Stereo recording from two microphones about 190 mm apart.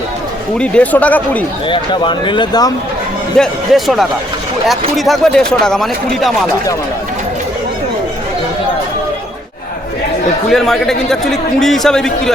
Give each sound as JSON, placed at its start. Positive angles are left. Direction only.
{"t": 0.6, "sound": "speech", "side_deg": 5}
{"t": 1.6, "sound": "speech", "side_deg": 25}
{"t": 3.3, "sound": "a man's voice", "side_deg": 0}
{"t": 10.5, "sound": "a man's voice", "side_deg": 0}